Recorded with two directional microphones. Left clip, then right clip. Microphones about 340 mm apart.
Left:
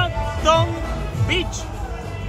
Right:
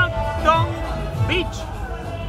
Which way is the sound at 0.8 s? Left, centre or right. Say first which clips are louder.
Right 1 dB; centre.